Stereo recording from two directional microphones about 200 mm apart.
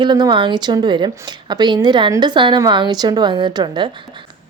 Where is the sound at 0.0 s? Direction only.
20° right (ahead or behind).